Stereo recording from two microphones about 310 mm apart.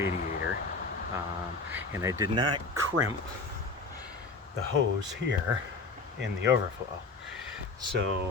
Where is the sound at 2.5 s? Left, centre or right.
Right.